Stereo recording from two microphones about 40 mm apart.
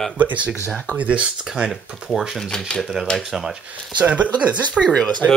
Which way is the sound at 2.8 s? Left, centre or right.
Centre.